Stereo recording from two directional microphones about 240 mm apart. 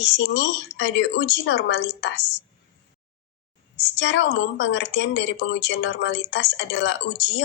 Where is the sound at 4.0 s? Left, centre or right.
Left.